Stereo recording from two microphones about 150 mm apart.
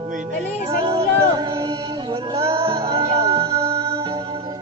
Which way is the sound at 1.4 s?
30° right (ahead or behind).